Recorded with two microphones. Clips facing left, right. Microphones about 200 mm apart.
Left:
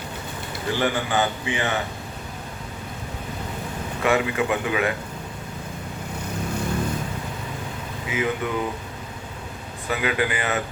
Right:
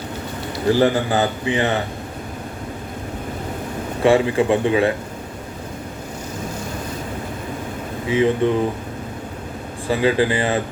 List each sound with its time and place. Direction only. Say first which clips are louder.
0.7 s a man's voice: right 7 dB; 35° right (ahead or behind)
4.0 s a man's voice: right 6 dB; 30° right (ahead or behind)
8.1 s a man's voice: right 9 dB; 30° right (ahead or behind)
9.9 s a man's voice: right 7 dB; 30° right (ahead or behind)